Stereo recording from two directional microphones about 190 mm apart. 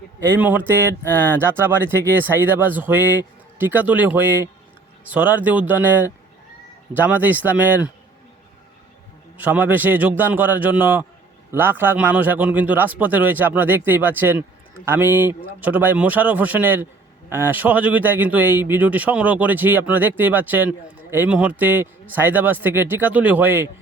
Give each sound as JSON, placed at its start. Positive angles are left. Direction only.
{"t": 0.3, "sound": "speech", "side_deg": -10}
{"t": 6.9, "sound": "speech", "side_deg": -10}
{"t": 9.4, "sound": "speech", "side_deg": -10}